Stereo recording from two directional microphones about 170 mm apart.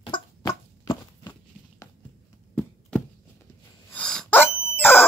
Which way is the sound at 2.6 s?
5° left (ahead or behind).